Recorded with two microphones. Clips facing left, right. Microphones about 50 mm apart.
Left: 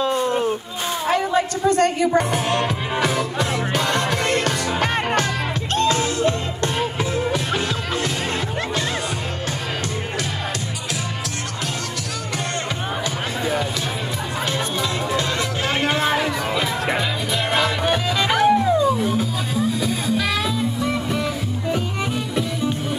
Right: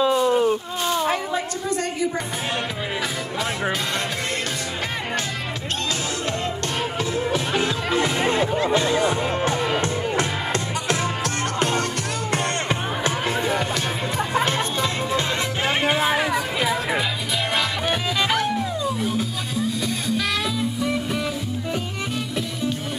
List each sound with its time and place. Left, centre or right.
0.1 s a sound: centre
1.1 s a sound: left
5.8 s music: left
7.5 s music: right
14.4 s music: right
15.8 s music: centre
17.6 s music: centre